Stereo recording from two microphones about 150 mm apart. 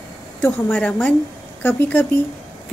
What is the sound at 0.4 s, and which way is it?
Speech, 10° left (ahead or behind).